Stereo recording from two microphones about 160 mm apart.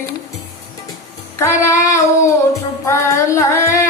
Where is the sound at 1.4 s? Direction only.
15° left (ahead or behind).